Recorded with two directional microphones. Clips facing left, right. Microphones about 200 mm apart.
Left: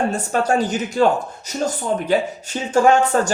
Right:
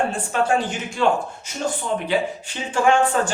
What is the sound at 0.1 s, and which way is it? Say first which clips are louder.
Speech: left 2 dB; 40° left (ahead or behind).